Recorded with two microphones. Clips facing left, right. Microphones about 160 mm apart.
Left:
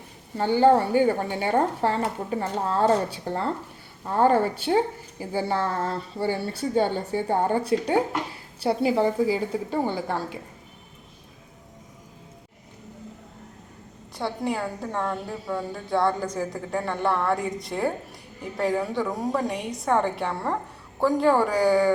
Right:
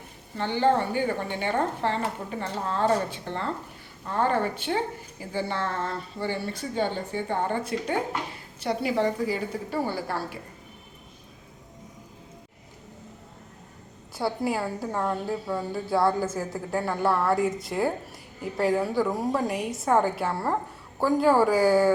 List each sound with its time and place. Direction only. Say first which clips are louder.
0.3 s a woman's voice: left 5 dB; 40° left (ahead or behind); by 10.2 s 20° left (ahead or behind)
14.2 s a woman's voice: right 1 dB; 5° right (ahead or behind)